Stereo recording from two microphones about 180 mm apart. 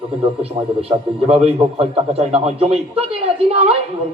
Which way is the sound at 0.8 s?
35° right (ahead or behind).